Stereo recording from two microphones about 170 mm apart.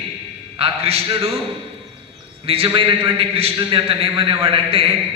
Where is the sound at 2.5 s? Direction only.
30° right (ahead or behind).